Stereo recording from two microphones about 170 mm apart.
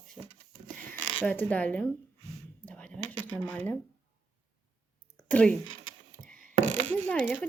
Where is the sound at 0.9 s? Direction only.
10° left (ahead or behind).